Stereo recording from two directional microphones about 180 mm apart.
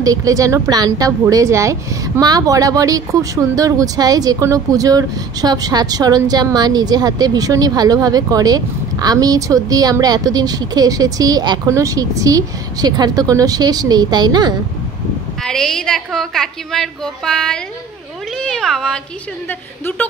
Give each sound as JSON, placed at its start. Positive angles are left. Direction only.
{"t": 0.0, "sound": "speech", "side_deg": -20}
{"t": 15.4, "sound": "a woman's voice", "side_deg": 5}
{"t": 18.4, "sound": "cat", "side_deg": 5}